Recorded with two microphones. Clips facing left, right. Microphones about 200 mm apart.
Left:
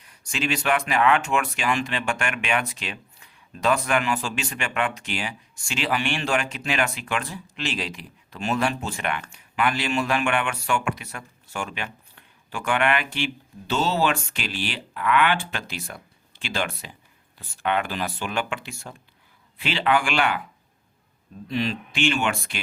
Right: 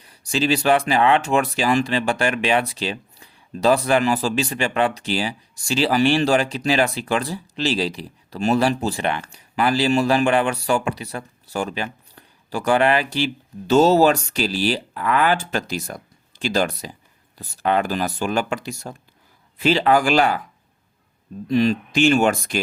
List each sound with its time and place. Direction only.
0.0 s speech: 35° right (ahead or behind)
21.4 s speech: 45° right (ahead or behind)